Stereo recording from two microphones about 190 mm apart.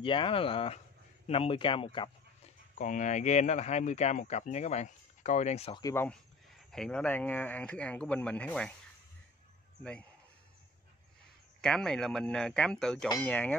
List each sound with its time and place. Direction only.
0.0 s speech: 25° left (ahead or behind)
2.8 s speech: 40° left (ahead or behind)
5.8 s speech: 15° left (ahead or behind)
6.7 s speech: 5° left (ahead or behind)
11.6 s speech: 5° left (ahead or behind)